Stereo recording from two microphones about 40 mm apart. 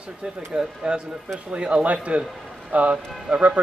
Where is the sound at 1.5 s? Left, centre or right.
Right.